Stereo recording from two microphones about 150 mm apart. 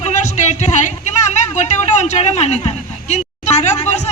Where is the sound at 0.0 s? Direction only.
50° left (ahead or behind).